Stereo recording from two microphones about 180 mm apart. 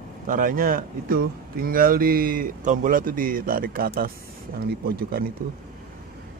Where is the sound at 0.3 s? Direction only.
50° right (ahead or behind).